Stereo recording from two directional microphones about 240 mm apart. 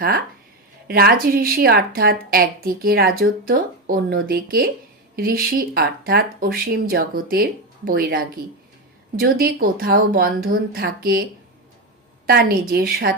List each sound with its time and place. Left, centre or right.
0.9 s a woman's voice: right